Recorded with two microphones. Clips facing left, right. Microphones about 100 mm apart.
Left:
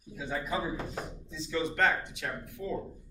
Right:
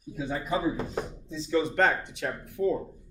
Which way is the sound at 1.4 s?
40° right (ahead or behind).